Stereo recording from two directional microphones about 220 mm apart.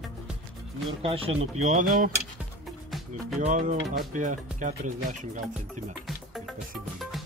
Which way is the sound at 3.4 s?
35° right (ahead or behind).